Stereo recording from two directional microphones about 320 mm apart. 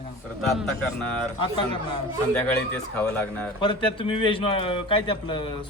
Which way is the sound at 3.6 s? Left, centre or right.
Centre.